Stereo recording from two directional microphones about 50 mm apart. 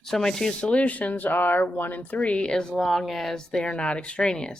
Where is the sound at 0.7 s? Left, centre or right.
Left; by 3.4 s centre.